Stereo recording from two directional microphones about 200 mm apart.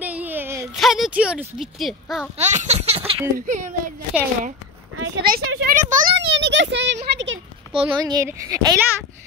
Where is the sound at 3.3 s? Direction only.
40° right (ahead or behind).